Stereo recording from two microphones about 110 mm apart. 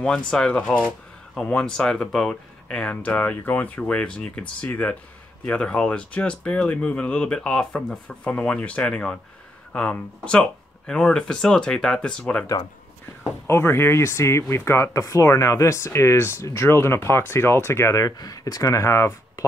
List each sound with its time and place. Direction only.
0.3 s speech: 10° left (ahead or behind)
13.5 s speech: 20° left (ahead or behind)